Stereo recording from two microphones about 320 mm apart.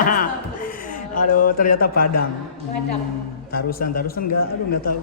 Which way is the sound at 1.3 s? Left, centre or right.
Left.